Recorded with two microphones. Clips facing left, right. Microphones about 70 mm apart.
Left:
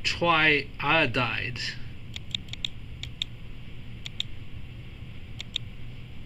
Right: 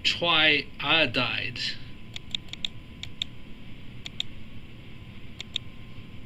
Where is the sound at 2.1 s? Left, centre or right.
Centre.